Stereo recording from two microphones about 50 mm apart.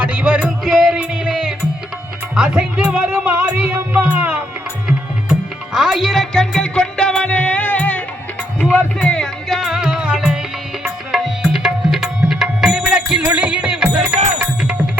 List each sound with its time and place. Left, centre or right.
0.0 s music: right
0.6 s music: centre
0.9 s music: centre
3.3 s music: right
4.9 s music: centre
6.3 s music: centre; by 8.9 s left
9.0 s music: centre
9.5 s music: centre
13.2 s music: right